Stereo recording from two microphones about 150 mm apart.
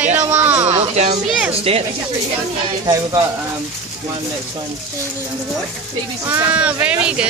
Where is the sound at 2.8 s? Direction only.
30° right (ahead or behind).